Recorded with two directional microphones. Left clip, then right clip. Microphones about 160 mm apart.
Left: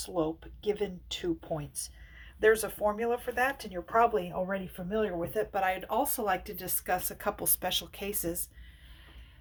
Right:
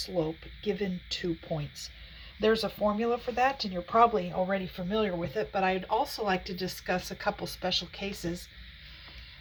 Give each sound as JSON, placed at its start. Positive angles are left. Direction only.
{"t": 0.0, "sound": "speech", "side_deg": 5}
{"t": 4.3, "sound": "speech", "side_deg": -5}
{"t": 5.3, "sound": "speech", "side_deg": 45}
{"t": 5.5, "sound": "speech", "side_deg": 70}